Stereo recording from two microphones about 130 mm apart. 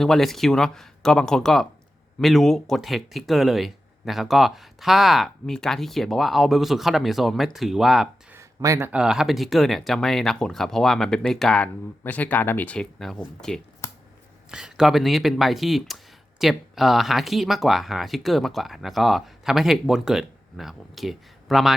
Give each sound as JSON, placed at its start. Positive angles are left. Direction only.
{"t": 0.0, "sound": "speech", "side_deg": 0}
{"t": 8.3, "sound": "a sound", "side_deg": -20}
{"t": 8.9, "sound": "speech", "side_deg": -5}